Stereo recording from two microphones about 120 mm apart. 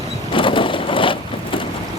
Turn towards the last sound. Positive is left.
turn(degrees=45)  # may be behind; listen again after turning